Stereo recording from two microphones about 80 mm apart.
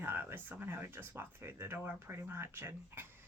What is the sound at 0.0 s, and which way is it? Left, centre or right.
A woman's voice, right.